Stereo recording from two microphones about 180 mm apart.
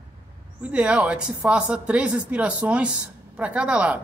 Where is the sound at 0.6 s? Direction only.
5° right (ahead or behind).